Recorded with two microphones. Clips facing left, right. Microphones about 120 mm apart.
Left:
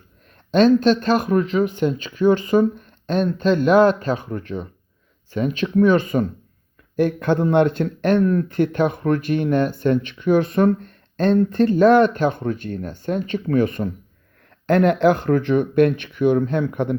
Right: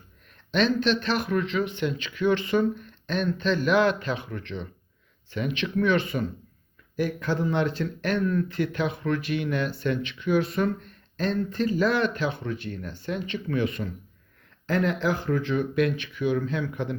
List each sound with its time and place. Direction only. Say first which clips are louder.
0.5 s speech: left 9 dB; 45° left (ahead or behind)
6.9 s speech: left 8 dB; 55° left (ahead or behind)
14.7 s speech: left 9 dB; 60° left (ahead or behind)